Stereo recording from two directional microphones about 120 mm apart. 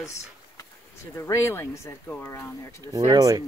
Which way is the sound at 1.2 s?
25° left (ahead or behind).